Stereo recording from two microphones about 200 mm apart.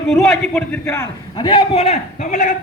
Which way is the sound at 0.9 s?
20° left (ahead or behind).